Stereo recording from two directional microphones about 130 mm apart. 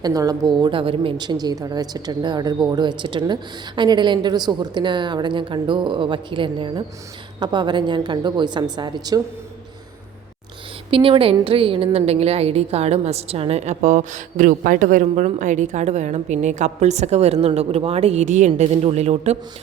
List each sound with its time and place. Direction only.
0.0 s a woman's voice: 30° right (ahead or behind)
10.9 s a woman's voice: 45° right (ahead or behind)